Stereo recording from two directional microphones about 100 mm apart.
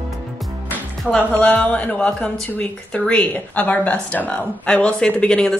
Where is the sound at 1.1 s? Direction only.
15° left (ahead or behind).